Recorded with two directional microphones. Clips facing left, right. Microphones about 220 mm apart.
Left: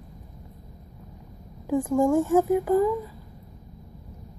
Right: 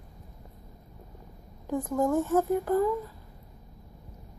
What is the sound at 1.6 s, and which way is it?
A woman's voice, 10° left (ahead or behind).